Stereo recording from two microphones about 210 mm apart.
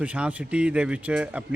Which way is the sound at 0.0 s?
5° right (ahead or behind).